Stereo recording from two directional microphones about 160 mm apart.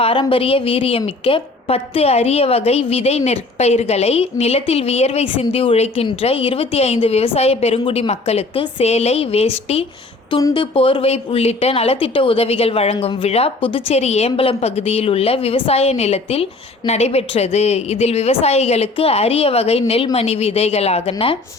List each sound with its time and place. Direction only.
0.0 s a woman's voice: 35° left (ahead or behind)